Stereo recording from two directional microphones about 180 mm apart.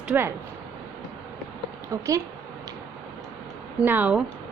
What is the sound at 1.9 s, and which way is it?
Speech, 15° right (ahead or behind).